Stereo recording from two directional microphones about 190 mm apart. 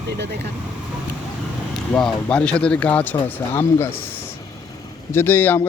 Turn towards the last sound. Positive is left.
turn(degrees=10)  # may be behind; listen again after turning